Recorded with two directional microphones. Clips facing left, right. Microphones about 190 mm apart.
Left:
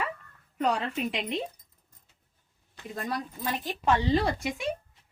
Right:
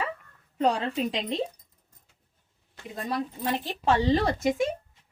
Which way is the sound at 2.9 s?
25° right (ahead or behind).